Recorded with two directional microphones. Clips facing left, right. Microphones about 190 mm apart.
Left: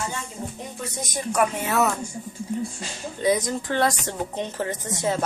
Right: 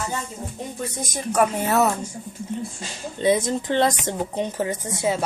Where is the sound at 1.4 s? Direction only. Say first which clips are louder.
Right 3 dB; 40° right (ahead or behind).